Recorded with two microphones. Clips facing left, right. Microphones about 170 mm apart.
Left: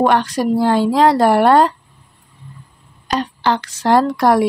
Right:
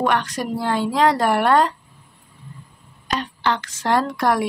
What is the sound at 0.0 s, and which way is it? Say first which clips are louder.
A woman's voice: left 6 dB; 35° left (ahead or behind).